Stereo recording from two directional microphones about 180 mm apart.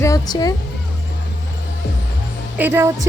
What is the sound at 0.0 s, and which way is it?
Speech, 20° left (ahead or behind).